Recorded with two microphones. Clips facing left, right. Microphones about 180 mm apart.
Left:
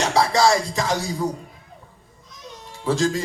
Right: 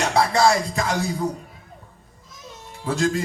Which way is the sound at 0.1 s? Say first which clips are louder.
Even; 30° left (ahead or behind).